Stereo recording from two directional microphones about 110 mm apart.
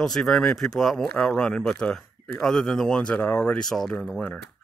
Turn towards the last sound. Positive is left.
turn(degrees=10)  # may be behind; listen again after turning